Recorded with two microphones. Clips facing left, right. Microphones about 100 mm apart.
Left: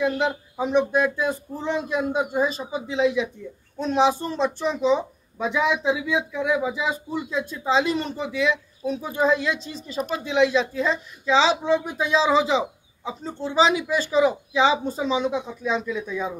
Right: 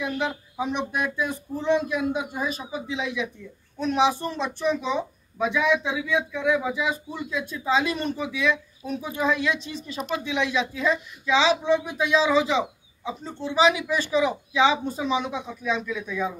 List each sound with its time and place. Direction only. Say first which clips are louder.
0.0 s speech: left 5 dB; 30° left (ahead or behind)